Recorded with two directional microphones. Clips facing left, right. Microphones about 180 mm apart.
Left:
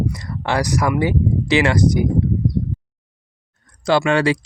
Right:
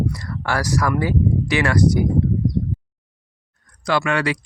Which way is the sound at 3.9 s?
30° left (ahead or behind).